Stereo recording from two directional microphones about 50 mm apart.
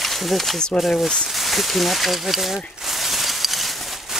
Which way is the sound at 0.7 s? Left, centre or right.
Centre.